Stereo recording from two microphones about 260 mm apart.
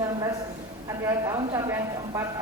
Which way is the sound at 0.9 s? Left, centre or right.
Centre.